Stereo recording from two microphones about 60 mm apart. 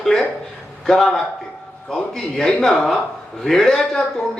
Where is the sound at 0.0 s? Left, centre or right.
Centre.